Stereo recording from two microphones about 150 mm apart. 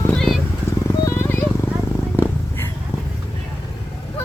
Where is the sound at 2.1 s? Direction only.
15° left (ahead or behind).